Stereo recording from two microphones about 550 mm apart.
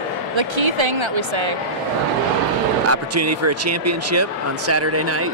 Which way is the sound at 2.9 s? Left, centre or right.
Right.